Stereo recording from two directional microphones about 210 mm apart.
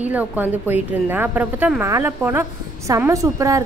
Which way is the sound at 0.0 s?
5° right (ahead or behind).